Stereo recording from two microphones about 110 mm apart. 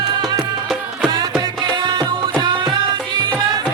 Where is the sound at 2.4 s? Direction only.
40° right (ahead or behind).